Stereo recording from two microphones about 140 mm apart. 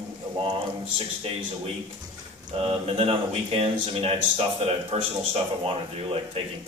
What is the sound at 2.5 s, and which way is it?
Speech, 45° right (ahead or behind).